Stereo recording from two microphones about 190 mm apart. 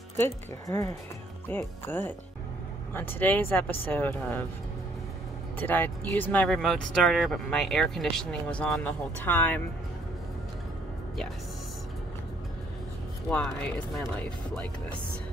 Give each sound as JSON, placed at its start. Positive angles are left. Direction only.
{"t": 0.2, "sound": "speech", "side_deg": 15}
{"t": 5.6, "sound": "speech", "side_deg": 10}
{"t": 13.3, "sound": "speech", "side_deg": 5}